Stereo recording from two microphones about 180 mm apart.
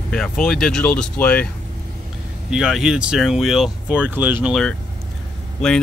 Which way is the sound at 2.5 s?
5° right (ahead or behind).